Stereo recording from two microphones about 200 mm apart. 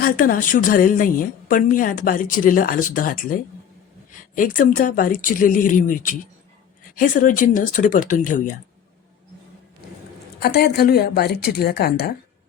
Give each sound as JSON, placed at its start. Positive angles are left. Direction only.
{"t": 0.0, "sound": "a woman's voice", "side_deg": 45}
{"t": 10.4, "sound": "a woman's voice", "side_deg": 55}